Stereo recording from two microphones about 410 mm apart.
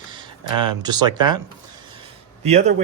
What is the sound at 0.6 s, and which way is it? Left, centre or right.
Speech, centre.